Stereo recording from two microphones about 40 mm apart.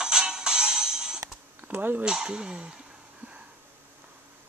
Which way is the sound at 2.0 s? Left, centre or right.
Centre.